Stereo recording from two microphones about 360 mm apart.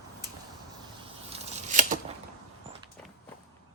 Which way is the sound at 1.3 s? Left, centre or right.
Centre.